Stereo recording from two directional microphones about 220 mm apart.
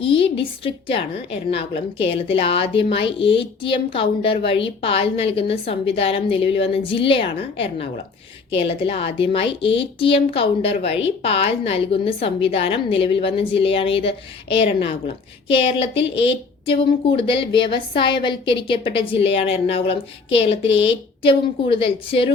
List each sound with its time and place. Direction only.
0.0 s a woman's voice: 25° left (ahead or behind)